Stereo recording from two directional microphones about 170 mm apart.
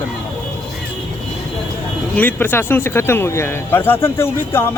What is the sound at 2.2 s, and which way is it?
Speech, 10° left (ahead or behind).